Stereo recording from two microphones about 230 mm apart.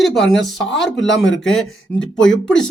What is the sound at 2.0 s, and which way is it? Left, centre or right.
Speech, left.